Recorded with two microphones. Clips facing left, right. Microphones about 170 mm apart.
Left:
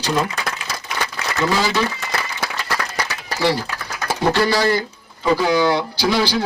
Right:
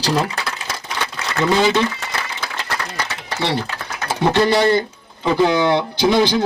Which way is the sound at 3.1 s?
25° right (ahead or behind).